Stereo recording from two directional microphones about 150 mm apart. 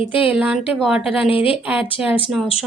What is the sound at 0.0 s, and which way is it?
Speech, 35° left (ahead or behind).